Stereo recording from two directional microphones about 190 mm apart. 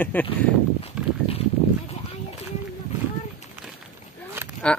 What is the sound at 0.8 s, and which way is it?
Horse, 30° left (ahead or behind).